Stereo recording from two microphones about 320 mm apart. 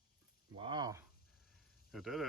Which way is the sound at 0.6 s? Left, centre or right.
Centre.